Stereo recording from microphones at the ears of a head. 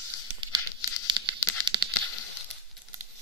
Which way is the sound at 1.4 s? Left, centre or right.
Left.